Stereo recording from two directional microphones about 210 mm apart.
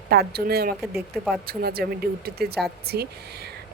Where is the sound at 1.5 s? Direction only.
45° right (ahead or behind).